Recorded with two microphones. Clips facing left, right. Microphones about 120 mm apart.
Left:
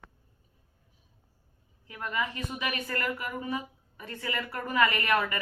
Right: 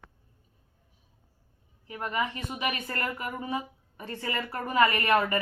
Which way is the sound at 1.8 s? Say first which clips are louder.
Right 2 dB; 25° right (ahead or behind).